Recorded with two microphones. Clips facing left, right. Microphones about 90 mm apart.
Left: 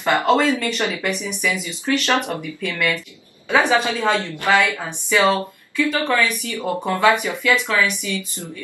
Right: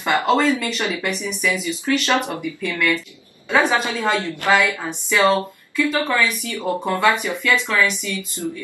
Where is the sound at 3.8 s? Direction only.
20° left (ahead or behind).